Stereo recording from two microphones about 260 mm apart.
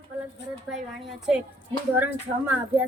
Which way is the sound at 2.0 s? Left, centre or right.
Centre.